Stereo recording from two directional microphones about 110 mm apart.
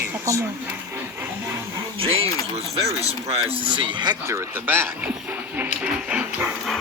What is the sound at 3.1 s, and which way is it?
Speech, 65° right (ahead or behind).